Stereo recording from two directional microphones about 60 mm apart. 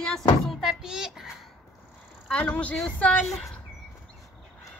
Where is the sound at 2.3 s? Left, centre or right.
Left.